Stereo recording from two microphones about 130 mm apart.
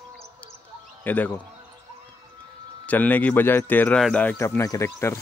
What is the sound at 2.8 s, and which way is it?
Speech, 10° left (ahead or behind).